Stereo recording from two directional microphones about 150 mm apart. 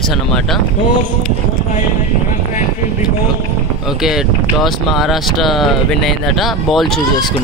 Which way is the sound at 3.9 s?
5° right (ahead or behind).